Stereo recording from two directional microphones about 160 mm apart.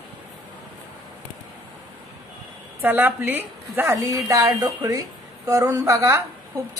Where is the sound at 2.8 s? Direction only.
10° right (ahead or behind).